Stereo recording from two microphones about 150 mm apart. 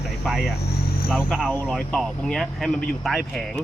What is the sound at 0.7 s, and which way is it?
Vehicle, 90° left.